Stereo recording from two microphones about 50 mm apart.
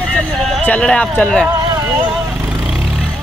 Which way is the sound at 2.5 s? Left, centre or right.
Centre.